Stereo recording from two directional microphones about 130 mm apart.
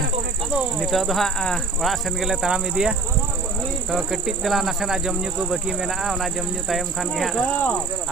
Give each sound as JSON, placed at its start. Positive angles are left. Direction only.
{"t": 0.5, "sound": "speech", "side_deg": 0}
{"t": 3.9, "sound": "speech", "side_deg": -5}